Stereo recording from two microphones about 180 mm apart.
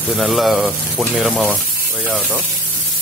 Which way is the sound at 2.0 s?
10° right (ahead or behind).